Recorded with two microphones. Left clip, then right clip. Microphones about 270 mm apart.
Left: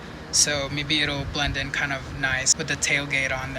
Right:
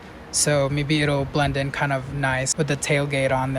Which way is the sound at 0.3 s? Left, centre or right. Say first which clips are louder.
Right 2 dB; right.